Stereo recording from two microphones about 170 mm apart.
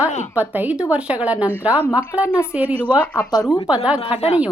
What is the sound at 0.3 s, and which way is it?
Speech, 10° right (ahead or behind).